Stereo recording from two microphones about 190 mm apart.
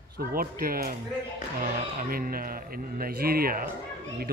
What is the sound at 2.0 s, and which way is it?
Speech, 50° right (ahead or behind).